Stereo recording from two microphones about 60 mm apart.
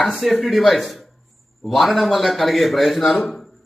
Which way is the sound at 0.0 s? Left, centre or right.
Centre.